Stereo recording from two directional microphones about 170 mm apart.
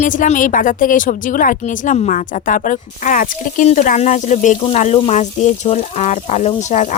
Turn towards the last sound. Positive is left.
turn(degrees=40)  # may be behind; listen again after turning